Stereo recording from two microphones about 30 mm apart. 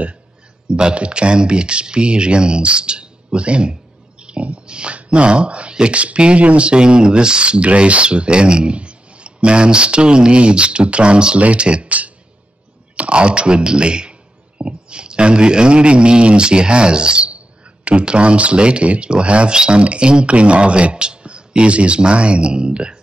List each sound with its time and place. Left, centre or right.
0.7 s speech: right
4.2 s a sound: right
4.9 s speech: right
11.3 s speech: right
12.9 s speech: right